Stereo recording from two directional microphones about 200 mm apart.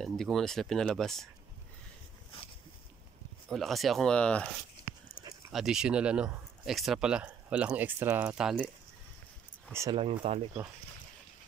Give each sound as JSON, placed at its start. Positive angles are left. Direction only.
{"t": 0.0, "sound": "speech", "side_deg": 0}
{"t": 3.4, "sound": "speech", "side_deg": 0}
{"t": 5.5, "sound": "speech", "side_deg": 0}
{"t": 9.7, "sound": "speech", "side_deg": -15}
{"t": 10.2, "sound": "speech", "side_deg": -30}